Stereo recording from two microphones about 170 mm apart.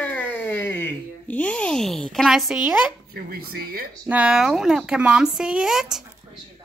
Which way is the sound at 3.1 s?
60° right (ahead or behind).